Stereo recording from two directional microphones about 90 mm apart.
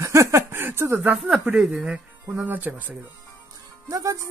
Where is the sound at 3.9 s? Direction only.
40° right (ahead or behind).